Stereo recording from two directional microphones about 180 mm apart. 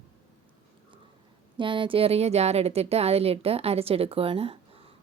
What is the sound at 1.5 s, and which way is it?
Speech, 30° right (ahead or behind).